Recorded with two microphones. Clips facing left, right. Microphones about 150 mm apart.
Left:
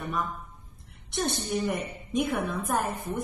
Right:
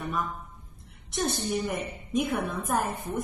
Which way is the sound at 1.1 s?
Centre (ahead or behind).